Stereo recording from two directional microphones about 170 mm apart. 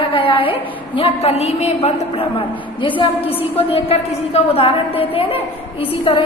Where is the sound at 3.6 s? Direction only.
35° left (ahead or behind).